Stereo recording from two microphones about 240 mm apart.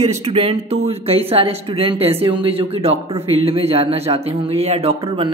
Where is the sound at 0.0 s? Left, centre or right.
Right.